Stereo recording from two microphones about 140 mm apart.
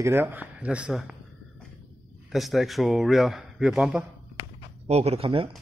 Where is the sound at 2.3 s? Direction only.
Centre (ahead or behind).